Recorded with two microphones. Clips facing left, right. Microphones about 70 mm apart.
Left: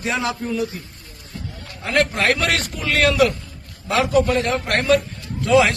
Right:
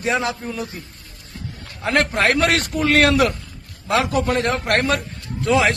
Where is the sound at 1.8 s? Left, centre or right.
Right.